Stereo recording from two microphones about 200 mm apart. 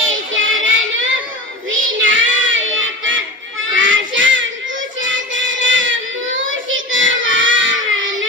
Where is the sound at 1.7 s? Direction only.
70° right (ahead or behind).